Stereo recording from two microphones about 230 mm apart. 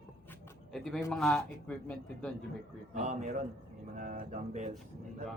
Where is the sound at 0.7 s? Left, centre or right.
Centre.